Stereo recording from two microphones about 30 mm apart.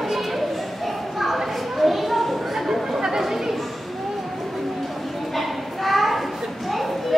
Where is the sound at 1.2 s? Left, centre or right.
Centre.